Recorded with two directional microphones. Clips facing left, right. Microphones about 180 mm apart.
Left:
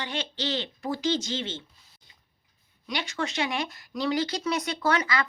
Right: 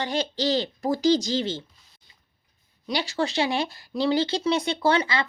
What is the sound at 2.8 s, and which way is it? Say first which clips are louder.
Speech: right 5 dB; 35° right (ahead or behind).